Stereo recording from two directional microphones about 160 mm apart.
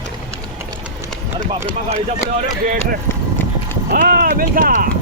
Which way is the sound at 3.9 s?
60° right (ahead or behind).